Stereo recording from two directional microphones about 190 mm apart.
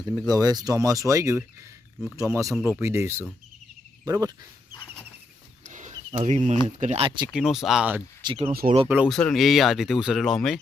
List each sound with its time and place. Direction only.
0.0 s speech: 20° right (ahead or behind)
5.6 s a sound: 40° right (ahead or behind)
6.7 s speech: 40° right (ahead or behind)
7.0 s speech: 25° right (ahead or behind)
7.3 s speech: centre (ahead or behind)
8.2 s speech: 25° right (ahead or behind)
8.9 s speech: 5° right (ahead or behind)